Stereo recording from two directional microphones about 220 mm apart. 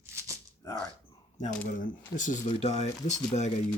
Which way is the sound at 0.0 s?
15° right (ahead or behind).